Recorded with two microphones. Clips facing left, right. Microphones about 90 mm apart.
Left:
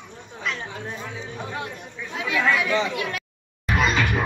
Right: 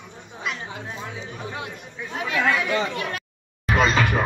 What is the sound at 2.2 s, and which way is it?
Chatter, 35° right (ahead or behind).